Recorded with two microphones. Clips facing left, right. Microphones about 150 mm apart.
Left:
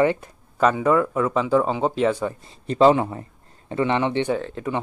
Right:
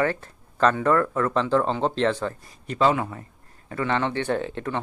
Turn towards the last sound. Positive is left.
turn(degrees=0)  # may be behind; listen again after turning